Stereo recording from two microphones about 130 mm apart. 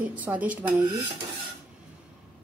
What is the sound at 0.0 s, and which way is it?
Speech, 10° right (ahead or behind).